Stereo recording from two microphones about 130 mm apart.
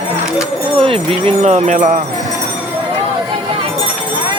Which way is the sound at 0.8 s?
45° right (ahead or behind).